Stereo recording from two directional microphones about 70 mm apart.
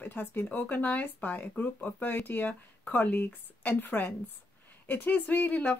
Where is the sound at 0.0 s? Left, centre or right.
Left.